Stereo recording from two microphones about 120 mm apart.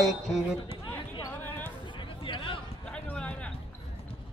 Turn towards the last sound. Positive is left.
turn(degrees=10)  # may be behind; listen again after turning